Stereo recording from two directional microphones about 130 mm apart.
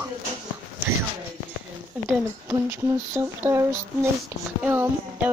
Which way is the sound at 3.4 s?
20° right (ahead or behind).